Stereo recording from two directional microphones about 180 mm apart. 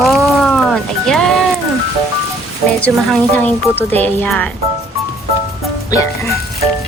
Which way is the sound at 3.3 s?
10° left (ahead or behind).